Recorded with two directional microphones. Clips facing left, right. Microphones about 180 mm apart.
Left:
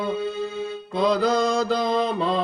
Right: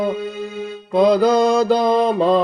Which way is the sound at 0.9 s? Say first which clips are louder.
Right 7 dB; 55° right (ahead or behind).